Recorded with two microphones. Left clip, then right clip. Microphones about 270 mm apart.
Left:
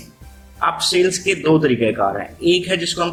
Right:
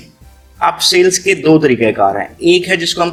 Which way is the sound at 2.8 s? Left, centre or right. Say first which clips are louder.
Right 6 dB; right.